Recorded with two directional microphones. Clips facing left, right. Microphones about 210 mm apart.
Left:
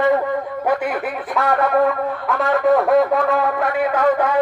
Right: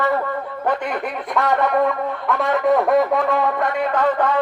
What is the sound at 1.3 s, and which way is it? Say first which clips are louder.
A man's voice: left 1 dB; 5° left (ahead or behind).